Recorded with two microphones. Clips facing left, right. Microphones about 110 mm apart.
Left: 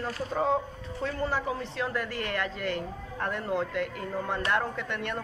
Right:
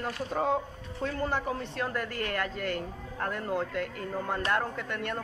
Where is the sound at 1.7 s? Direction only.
45° right (ahead or behind).